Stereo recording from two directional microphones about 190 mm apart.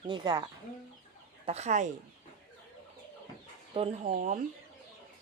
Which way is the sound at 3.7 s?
35° right (ahead or behind).